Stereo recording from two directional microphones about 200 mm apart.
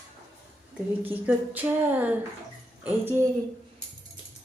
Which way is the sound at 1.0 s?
10° right (ahead or behind).